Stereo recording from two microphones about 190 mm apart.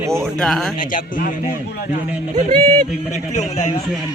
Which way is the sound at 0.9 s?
45° left (ahead or behind).